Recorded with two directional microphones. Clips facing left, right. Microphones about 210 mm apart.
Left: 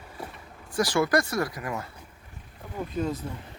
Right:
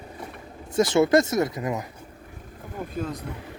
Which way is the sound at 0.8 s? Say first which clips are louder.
Right 5 dB; 25° right (ahead or behind).